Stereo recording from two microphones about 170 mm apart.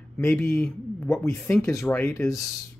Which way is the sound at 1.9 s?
15° left (ahead or behind).